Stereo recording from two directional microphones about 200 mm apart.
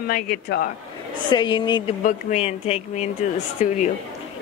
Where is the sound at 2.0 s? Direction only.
35° left (ahead or behind).